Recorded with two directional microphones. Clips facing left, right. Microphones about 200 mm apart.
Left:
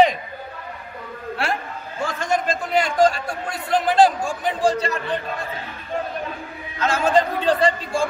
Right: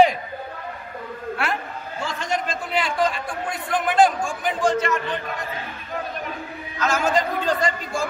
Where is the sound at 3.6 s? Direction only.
35° left (ahead or behind).